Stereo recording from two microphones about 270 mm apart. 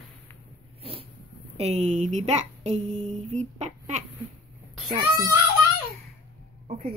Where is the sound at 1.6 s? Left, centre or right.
Right.